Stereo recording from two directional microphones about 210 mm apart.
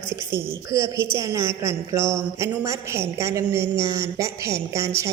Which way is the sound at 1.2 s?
15° right (ahead or behind).